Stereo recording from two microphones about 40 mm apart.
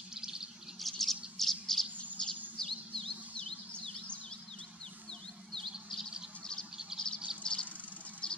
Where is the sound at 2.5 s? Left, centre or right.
Centre.